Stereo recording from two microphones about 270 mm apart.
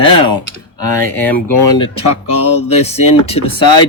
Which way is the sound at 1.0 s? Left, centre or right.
Centre.